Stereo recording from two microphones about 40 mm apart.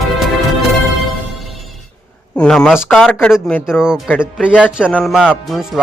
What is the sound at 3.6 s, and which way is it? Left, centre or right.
Speech, centre.